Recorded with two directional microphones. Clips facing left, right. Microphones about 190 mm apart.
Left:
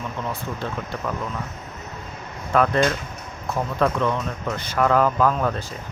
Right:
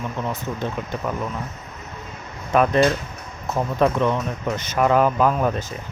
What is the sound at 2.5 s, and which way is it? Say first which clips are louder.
Speech: right 2 dB; 20° right (ahead or behind).